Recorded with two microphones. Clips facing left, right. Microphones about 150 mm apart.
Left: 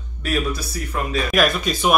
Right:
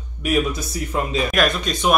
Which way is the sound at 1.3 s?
Centre (ahead or behind).